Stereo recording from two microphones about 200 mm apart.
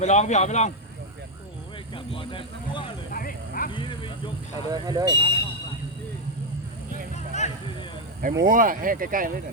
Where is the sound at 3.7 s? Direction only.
25° left (ahead or behind).